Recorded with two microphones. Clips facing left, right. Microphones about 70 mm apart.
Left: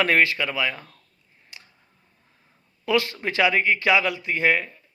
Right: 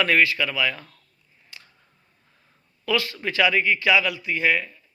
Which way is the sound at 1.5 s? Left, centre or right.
Left.